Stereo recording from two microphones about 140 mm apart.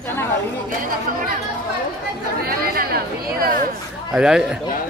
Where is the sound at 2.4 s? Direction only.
90° right.